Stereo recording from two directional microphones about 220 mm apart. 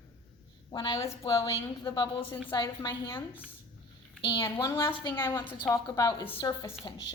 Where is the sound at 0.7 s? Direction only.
20° left (ahead or behind).